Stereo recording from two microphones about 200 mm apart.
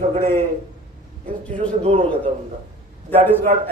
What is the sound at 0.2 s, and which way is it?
Speech, 45° right (ahead or behind).